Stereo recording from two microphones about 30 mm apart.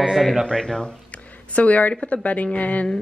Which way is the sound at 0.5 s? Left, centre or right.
Left.